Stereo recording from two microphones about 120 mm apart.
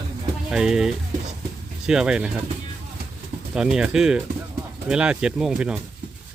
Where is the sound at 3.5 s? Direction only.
5° right (ahead or behind).